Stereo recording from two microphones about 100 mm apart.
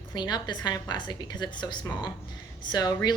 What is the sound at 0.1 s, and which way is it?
A woman's voice, 45° left (ahead or behind).